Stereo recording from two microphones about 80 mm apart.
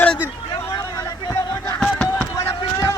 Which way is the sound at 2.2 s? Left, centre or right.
Left.